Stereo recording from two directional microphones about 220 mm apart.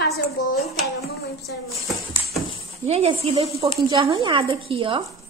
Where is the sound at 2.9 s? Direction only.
25° right (ahead or behind).